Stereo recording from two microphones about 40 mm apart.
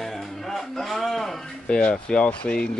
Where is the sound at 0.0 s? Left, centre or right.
Centre.